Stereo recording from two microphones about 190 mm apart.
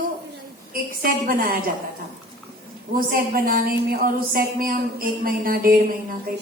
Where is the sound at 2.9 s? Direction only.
50° right (ahead or behind).